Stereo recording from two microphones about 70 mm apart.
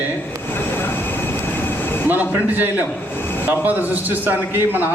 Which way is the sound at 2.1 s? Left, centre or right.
Right.